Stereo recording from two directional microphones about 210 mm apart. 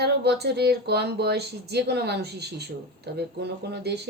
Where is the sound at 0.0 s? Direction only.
50° right (ahead or behind).